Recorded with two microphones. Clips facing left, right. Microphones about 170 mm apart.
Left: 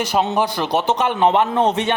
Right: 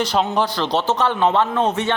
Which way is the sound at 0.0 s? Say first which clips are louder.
Left 1 dB; 10° left (ahead or behind).